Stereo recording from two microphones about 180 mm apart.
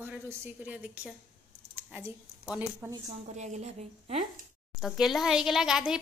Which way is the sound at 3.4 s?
40° right (ahead or behind).